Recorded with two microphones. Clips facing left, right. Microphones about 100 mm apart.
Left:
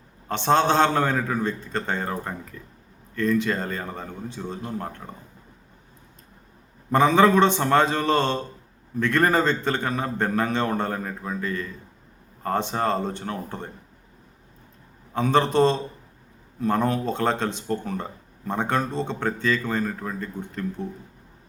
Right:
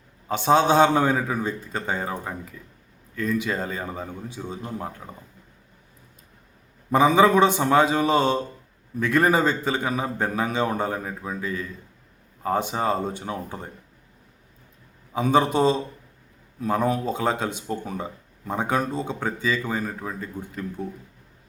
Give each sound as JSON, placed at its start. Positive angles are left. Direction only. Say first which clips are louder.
{"t": 0.3, "sound": "speech", "louder": "right 1 dB", "side_deg": -5}
{"t": 6.9, "sound": "speech", "louder": "even", "side_deg": -10}
{"t": 15.1, "sound": "speech", "louder": "even", "side_deg": -10}